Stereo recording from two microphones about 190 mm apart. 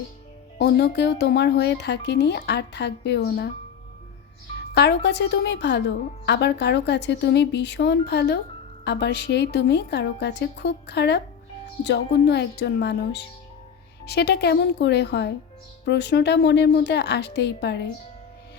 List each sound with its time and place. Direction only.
0.6 s speech: 60° left (ahead or behind)
4.7 s speech: 60° left (ahead or behind)